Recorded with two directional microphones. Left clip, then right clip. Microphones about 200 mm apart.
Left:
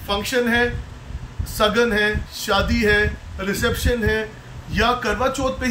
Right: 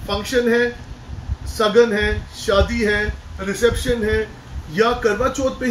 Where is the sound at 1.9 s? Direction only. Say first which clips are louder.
Left 1 dB; 40° left (ahead or behind).